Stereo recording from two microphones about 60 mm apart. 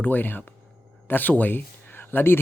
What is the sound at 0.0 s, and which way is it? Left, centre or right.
Speech, left.